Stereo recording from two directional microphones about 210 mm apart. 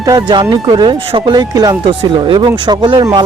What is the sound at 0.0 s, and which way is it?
Speech, 20° right (ahead or behind).